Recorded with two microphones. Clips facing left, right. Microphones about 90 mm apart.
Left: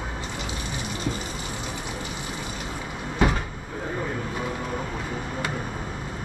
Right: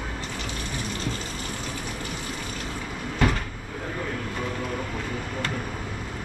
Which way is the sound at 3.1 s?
10° left (ahead or behind).